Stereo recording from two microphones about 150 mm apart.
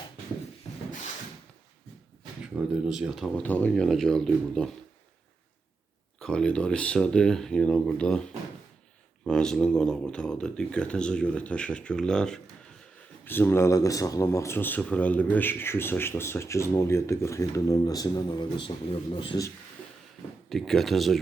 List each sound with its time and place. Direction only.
2.8 s speech: 5° right (ahead or behind)
6.1 s speech: 5° left (ahead or behind); by 19.4 s 35° left (ahead or behind)
20.5 s speech: centre (ahead or behind)